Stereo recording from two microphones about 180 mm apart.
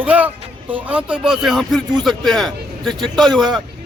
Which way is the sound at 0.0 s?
10° right (ahead or behind).